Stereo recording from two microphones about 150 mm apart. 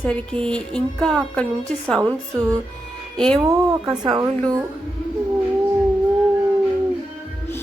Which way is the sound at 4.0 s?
25° right (ahead or behind).